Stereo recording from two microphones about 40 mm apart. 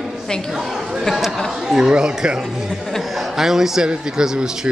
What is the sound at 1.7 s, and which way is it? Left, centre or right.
Speech, centre.